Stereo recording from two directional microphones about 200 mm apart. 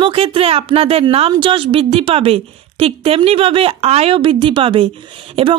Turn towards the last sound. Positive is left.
turn(degrees=-25)  # may be behind; listen again after turning